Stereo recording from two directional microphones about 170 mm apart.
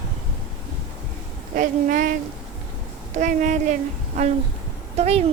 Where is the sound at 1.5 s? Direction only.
55° right (ahead or behind).